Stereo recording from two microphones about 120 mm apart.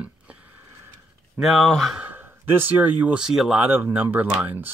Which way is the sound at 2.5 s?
15° right (ahead or behind).